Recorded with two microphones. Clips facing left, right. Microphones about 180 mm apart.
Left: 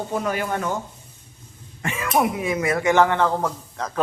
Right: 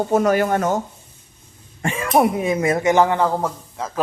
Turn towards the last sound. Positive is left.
turn(degrees=-10)  # may be behind; listen again after turning